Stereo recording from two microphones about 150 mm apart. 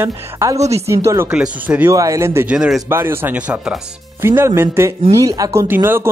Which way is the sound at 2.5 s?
5° right (ahead or behind).